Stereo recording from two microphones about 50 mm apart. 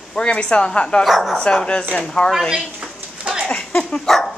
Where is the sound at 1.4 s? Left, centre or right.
Centre.